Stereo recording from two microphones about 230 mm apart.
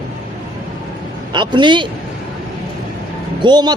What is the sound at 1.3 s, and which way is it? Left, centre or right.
Speech, centre.